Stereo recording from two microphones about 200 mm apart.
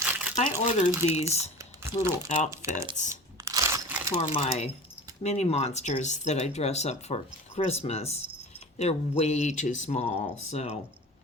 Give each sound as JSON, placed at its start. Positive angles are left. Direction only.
{"t": 0.0, "sound": "crumpling", "side_deg": -5}
{"t": 0.8, "sound": "speech", "side_deg": 35}
{"t": 1.5, "sound": "typing", "side_deg": -15}
{"t": 2.5, "sound": "speech", "side_deg": -15}
{"t": 3.0, "sound": "speech", "side_deg": 40}
{"t": 3.4, "sound": "crunch", "side_deg": -15}
{"t": 4.2, "sound": "speech", "side_deg": 30}